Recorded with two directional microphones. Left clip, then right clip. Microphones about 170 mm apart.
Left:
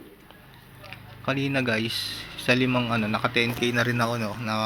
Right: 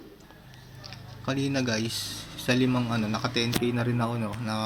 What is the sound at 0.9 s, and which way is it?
A man's voice, 10° left (ahead or behind).